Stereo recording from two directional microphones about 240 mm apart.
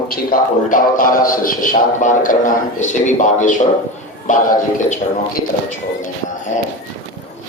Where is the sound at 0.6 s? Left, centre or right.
Left.